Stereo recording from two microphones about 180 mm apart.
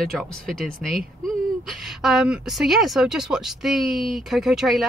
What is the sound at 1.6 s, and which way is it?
A woman's voice, centre (ahead or behind).